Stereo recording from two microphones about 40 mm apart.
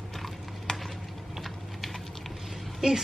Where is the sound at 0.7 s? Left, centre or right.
Centre.